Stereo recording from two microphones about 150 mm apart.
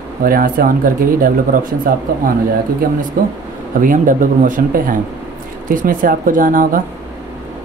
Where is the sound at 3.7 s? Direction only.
65° right (ahead or behind).